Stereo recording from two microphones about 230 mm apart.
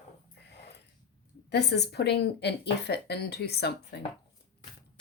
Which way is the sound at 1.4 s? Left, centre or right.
Left.